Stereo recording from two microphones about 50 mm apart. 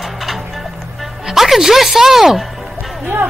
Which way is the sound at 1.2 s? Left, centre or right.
Centre.